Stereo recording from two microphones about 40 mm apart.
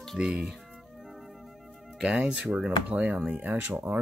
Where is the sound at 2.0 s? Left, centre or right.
Right.